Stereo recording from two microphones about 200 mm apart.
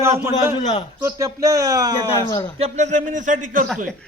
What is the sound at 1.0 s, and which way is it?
A man's voice, 15° right (ahead or behind).